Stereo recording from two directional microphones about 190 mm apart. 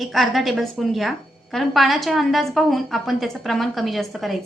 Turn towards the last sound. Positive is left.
turn(degrees=0)  # may be behind; listen again after turning